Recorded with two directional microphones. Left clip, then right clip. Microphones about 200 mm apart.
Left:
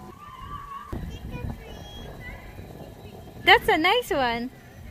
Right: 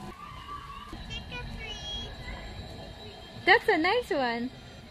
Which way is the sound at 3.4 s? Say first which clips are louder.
Left 5 dB; 15° left (ahead or behind).